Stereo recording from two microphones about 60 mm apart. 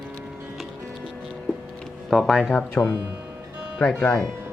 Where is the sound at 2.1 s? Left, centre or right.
Centre.